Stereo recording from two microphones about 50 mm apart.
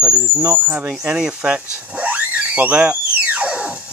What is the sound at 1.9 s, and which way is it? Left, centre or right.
Music, right.